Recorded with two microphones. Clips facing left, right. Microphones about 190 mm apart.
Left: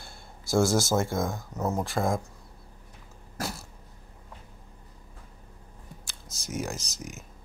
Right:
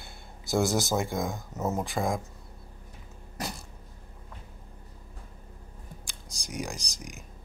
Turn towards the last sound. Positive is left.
turn(degrees=5)  # may be behind; listen again after turning